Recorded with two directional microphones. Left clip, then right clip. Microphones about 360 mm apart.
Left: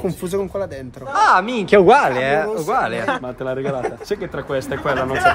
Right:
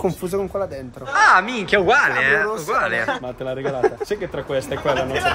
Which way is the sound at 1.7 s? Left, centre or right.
Centre.